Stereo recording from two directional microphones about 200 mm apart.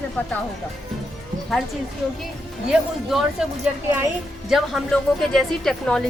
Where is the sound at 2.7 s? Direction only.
5° right (ahead or behind).